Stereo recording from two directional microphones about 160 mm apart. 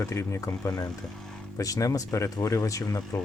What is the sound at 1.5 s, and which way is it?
Speech, 20° left (ahead or behind).